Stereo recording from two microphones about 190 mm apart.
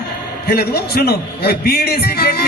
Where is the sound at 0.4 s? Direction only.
55° left (ahead or behind).